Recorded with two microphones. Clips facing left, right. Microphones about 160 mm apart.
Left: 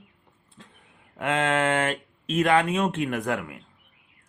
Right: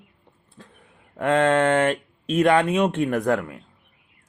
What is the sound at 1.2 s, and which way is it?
Speech, 35° right (ahead or behind).